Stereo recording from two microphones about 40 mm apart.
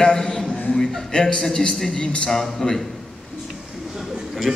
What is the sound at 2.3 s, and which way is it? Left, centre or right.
Speech, centre.